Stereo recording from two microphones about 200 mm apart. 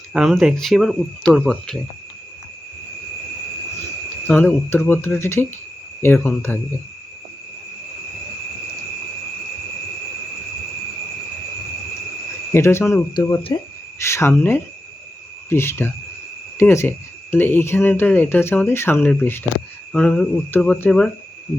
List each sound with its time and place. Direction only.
0.1 s speech: centre (ahead or behind)
4.3 s speech: 10° left (ahead or behind)
12.5 s speech: 15° left (ahead or behind)